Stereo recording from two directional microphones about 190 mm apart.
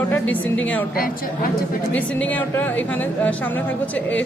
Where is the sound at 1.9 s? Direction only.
5° left (ahead or behind).